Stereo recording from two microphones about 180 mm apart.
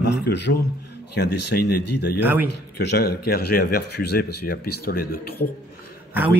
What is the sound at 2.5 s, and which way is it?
A man's voice, 65° left (ahead or behind).